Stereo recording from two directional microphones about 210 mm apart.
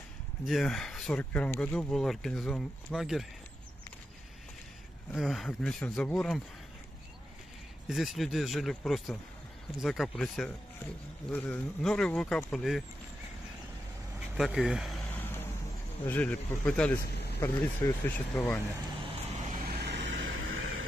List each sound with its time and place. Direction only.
0.5 s speech: centre (ahead or behind)
5.1 s speech: centre (ahead or behind)
7.9 s speech: centre (ahead or behind)
14.3 s speech: centre (ahead or behind)
15.0 s vehicle: 10° left (ahead or behind)
16.1 s speech: 10° left (ahead or behind)
17.0 s vehicle: 50° left (ahead or behind)
17.4 s speech: 10° left (ahead or behind)
18.9 s vehicle: 35° right (ahead or behind)
19.7 s vehicle: 55° right (ahead or behind); by 20.8 s 70° right (ahead or behind)